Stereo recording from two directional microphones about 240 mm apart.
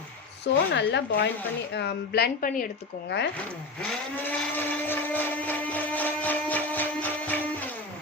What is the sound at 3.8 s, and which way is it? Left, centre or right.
Blender, centre.